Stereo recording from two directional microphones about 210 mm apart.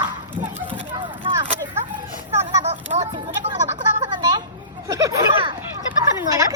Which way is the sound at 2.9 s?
30° right (ahead or behind).